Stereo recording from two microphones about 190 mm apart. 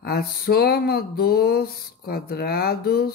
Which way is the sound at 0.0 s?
55° left (ahead or behind).